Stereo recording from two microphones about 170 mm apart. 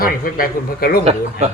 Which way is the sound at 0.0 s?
55° left (ahead or behind).